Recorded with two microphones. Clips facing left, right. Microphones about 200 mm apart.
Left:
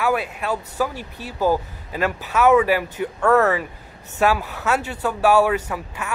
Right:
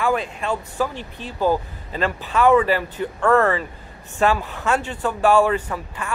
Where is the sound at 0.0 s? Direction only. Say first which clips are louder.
Even; 5° left (ahead or behind).